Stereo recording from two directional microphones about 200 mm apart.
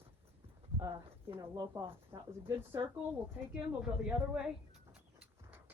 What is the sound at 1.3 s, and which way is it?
A woman's voice, 20° right (ahead or behind).